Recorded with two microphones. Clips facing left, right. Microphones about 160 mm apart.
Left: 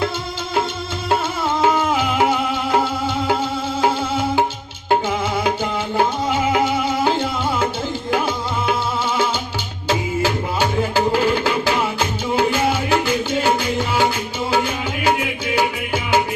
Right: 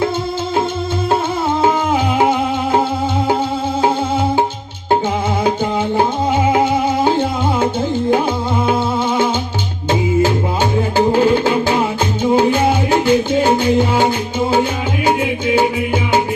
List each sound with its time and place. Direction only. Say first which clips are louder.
1.6 s music: right 1 dB; 30° right (ahead or behind)
6.0 s music: right 2 dB; 30° right (ahead or behind)
10.9 s music: right 7 dB; 30° right (ahead or behind)
12.2 s music: right 7 dB; 15° right (ahead or behind)
12.5 s music: right 4 dB; 30° right (ahead or behind)